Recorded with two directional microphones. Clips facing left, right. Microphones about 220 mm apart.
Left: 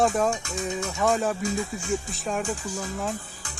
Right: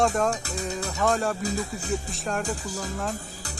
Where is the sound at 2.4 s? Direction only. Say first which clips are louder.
Left 1 dB; 35° right (ahead or behind).